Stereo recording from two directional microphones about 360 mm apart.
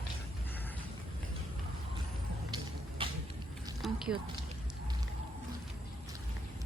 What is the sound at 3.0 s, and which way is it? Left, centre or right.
Vehicle, centre.